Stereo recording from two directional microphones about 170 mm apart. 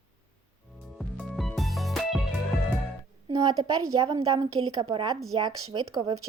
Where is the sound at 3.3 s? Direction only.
25° right (ahead or behind).